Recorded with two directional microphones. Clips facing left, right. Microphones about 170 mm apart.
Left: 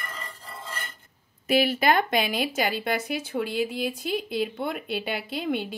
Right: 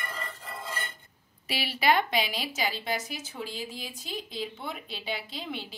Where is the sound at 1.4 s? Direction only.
50° left (ahead or behind).